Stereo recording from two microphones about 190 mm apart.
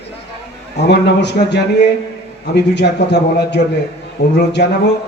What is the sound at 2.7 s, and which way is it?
A man's voice, 60° left (ahead or behind).